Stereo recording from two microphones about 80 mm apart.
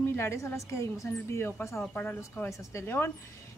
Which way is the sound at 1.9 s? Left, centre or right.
Centre.